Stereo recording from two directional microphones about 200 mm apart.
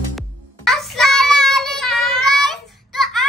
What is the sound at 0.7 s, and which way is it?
Child singing, centre (ahead or behind).